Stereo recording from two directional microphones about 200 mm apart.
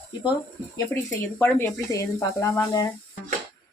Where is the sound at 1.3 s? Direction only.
10° left (ahead or behind).